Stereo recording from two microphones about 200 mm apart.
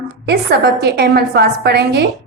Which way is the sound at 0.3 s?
55° right (ahead or behind).